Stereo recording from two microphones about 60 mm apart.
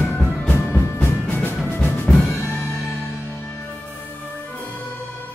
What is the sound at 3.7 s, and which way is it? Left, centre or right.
Music, left.